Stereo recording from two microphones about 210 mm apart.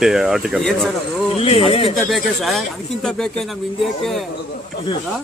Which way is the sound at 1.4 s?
25° left (ahead or behind).